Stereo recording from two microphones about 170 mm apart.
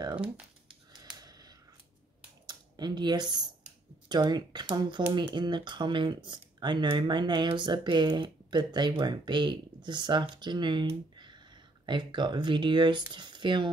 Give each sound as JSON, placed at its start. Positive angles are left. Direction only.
{"t": 0.1, "sound": "crumpling", "side_deg": -5}
{"t": 1.1, "sound": "a sound", "side_deg": -20}
{"t": 2.4, "sound": "speech", "side_deg": -25}